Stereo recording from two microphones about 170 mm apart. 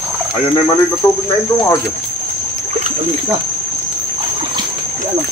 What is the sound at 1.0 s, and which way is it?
Speech, 15° left (ahead or behind).